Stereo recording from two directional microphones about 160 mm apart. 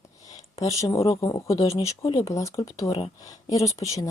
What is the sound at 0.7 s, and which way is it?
Speech, 20° left (ahead or behind).